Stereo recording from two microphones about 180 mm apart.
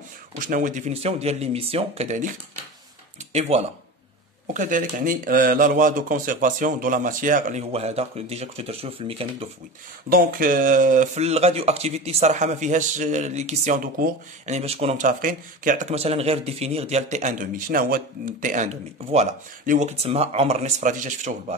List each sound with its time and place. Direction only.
0.4 s speech: 45° right (ahead or behind)
3.3 s speech: 35° right (ahead or behind)
4.6 s speech: 45° right (ahead or behind)
10.0 s speech: 55° right (ahead or behind)